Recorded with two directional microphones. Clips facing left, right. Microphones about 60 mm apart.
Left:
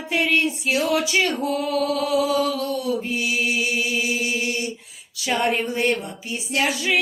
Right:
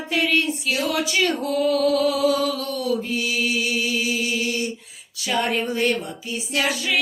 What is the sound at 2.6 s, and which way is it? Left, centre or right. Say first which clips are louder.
Mantra: even; centre.